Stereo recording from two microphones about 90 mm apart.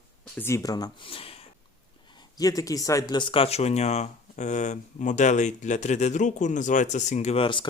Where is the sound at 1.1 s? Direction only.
90° left.